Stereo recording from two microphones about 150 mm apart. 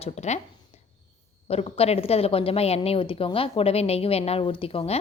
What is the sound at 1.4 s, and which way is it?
A woman's voice, 40° left (ahead or behind).